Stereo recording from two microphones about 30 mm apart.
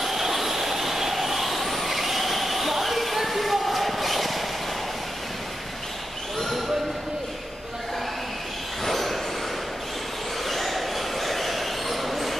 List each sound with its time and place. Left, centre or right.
0.0 s vehicle: centre
8.8 s vehicle: centre
10.4 s a sound: centre